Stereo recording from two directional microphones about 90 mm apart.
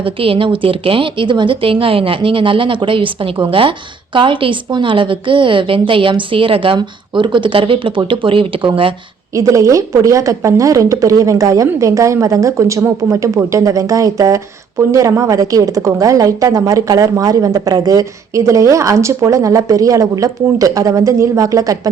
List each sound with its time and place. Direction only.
0.0 s speech: 85° right
6.7 s speech: 65° right (ahead or behind)
9.3 s a woman's voice: 35° right (ahead or behind)